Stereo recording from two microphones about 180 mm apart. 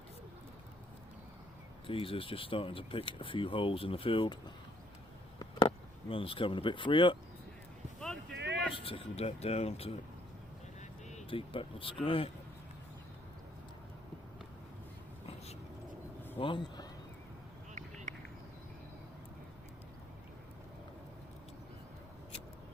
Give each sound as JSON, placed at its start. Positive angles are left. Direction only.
{"t": 1.9, "sound": "speech", "side_deg": 30}
{"t": 5.4, "sound": "speech", "side_deg": 25}
{"t": 7.9, "sound": "a sound", "side_deg": 5}
{"t": 8.7, "sound": "speech", "side_deg": 30}
{"t": 10.8, "sound": "vehicle", "side_deg": 35}
{"t": 12.0, "sound": "speech", "side_deg": 30}
{"t": 16.4, "sound": "speech", "side_deg": 25}
{"t": 18.1, "sound": "a sound", "side_deg": -45}